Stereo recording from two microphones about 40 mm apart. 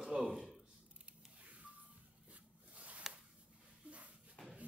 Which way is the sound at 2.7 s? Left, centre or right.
Right.